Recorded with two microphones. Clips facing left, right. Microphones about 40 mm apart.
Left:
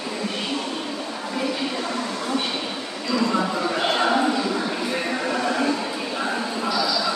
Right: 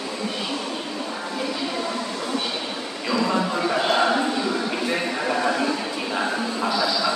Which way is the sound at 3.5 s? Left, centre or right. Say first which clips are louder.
Right 1 dB; centre.